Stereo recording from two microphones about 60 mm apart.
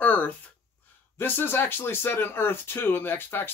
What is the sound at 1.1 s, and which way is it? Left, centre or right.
Speech, left.